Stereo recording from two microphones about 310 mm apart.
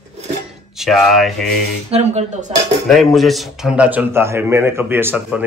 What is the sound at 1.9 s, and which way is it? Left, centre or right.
Speech, centre.